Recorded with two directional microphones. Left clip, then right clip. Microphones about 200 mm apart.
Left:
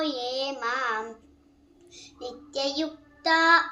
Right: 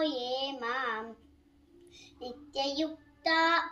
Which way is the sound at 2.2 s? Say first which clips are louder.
Left 4 dB; 15° left (ahead or behind).